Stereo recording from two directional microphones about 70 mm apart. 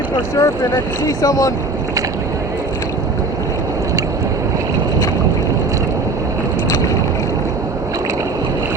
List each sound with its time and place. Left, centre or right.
0.3 s speech: left